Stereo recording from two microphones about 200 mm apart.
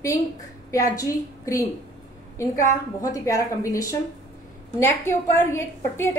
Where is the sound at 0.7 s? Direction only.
15° left (ahead or behind).